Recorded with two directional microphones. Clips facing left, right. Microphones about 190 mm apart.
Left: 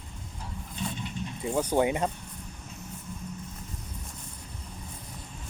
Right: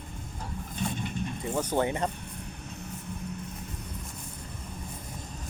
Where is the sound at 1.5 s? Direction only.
10° left (ahead or behind).